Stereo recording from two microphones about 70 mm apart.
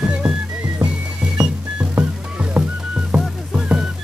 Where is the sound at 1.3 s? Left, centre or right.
Centre.